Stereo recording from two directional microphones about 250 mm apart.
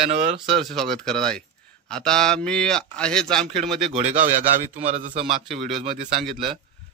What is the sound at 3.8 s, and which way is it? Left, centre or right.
A man's voice, right.